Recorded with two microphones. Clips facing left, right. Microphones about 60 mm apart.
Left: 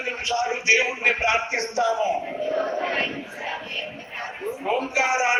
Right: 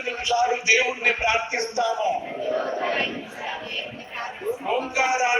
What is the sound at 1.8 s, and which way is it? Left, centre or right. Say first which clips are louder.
Speech: left 3 dB; left.